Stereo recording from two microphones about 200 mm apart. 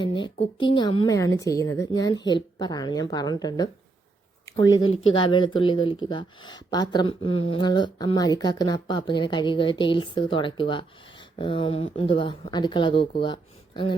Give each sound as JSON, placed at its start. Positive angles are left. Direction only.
{"t": 0.0, "sound": "speech", "side_deg": 25}